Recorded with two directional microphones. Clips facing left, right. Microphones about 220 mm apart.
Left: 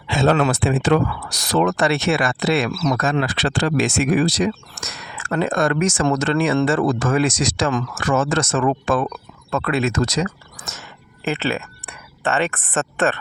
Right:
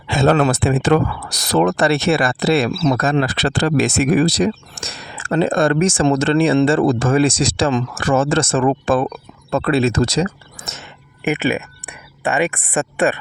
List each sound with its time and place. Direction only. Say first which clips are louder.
0.1 s speech: right 3 dB; 45° right (ahead or behind); by 13.1 s 10° right (ahead or behind)